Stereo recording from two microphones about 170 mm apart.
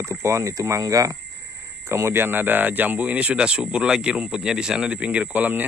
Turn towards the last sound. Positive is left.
turn(degrees=-10)  # may be behind; listen again after turning